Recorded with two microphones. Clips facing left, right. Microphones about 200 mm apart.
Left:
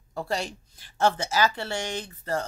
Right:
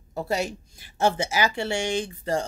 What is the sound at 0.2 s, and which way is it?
Speech, 10° right (ahead or behind).